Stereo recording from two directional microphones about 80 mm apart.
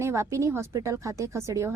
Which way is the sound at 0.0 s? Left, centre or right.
Right.